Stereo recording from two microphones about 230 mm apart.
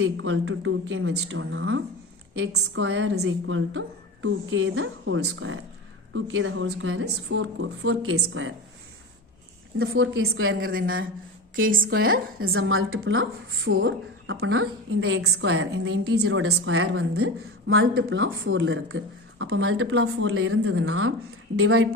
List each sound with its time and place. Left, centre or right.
0.0 s a woman's voice: right
9.7 s a woman's voice: right
11.7 s a woman's voice: right
12.4 s a woman's voice: right